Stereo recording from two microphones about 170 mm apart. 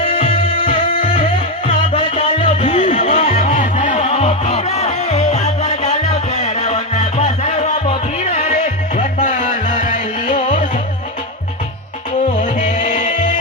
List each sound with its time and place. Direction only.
0.0 s music: 35° left (ahead or behind)
2.4 s music: 50° left (ahead or behind)
12.5 s music: 50° left (ahead or behind)